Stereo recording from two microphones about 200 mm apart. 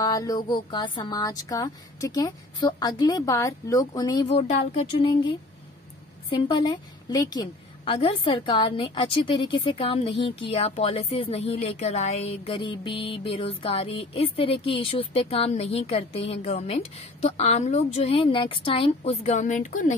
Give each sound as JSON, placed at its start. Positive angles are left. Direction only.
{"t": 0.0, "sound": "a woman's voice", "side_deg": 15}
{"t": 4.4, "sound": "speech", "side_deg": 30}
{"t": 6.3, "sound": "a woman's voice", "side_deg": 25}